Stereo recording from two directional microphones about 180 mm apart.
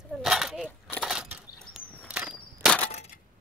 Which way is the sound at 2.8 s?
35° left (ahead or behind).